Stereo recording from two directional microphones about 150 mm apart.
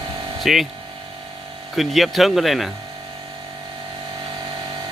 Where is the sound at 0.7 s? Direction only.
35° right (ahead or behind).